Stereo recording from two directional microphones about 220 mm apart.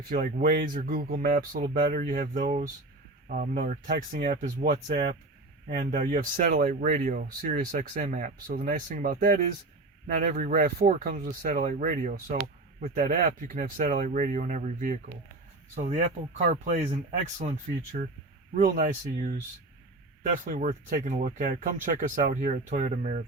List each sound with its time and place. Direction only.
0.1 s speech: 40° right (ahead or behind)
18.5 s speech: 35° right (ahead or behind)
20.4 s speech: 35° right (ahead or behind)